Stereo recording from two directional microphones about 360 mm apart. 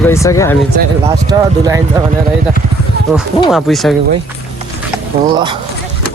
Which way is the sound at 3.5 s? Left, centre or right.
Centre.